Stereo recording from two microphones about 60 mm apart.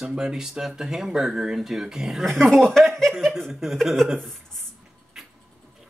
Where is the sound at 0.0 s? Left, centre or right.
Centre.